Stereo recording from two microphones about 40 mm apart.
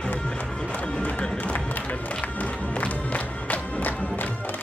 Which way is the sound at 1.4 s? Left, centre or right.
Left.